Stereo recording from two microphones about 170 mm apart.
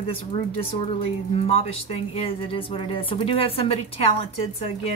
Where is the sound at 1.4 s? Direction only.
35° left (ahead or behind).